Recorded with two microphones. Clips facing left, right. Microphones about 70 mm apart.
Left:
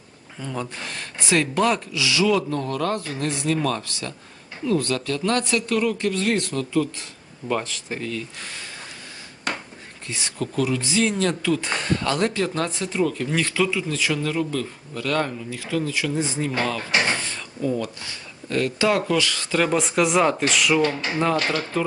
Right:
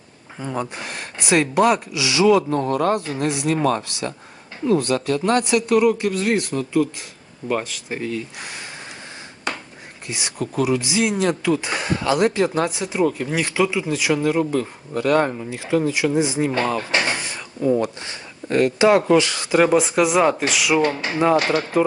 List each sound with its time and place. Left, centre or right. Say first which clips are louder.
0.3 s speech: right 4 dB; right
2.2 s speech: right 7 dB; right
3.5 s speech: right 3 dB; right; by 7.9 s centre
7.9 s speech: right 4 dB; centre
10.1 s speech: right 2 dB; centre
16.5 s speech: right 4 dB; right
17.2 s drawer open or close: right 2 dB; centre
18.0 s speech: right 3 dB; right
19.7 s speech: right 3 dB; centre
20.7 s speech: right 2 dB; centre